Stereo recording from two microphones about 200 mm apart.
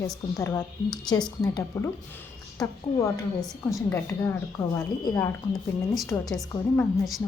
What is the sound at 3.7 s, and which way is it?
A woman's voice, 10° left (ahead or behind).